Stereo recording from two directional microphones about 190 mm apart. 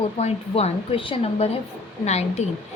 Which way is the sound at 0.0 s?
30° left (ahead or behind).